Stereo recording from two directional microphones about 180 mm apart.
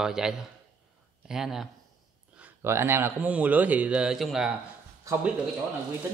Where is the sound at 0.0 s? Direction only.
5° right (ahead or behind).